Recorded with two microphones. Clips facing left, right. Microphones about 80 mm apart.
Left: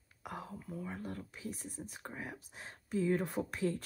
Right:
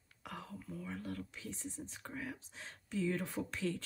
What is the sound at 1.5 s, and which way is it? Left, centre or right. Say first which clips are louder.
Speech: right 1 dB; left.